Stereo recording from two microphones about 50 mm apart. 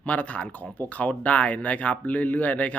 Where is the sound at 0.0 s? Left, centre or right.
Left.